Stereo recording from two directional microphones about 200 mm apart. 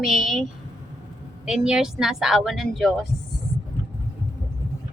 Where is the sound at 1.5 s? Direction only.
5° right (ahead or behind).